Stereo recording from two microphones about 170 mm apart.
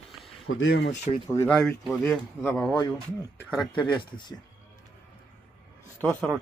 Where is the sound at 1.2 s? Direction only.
20° left (ahead or behind).